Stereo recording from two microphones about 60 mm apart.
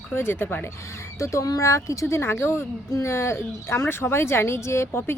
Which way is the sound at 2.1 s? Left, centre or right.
Left.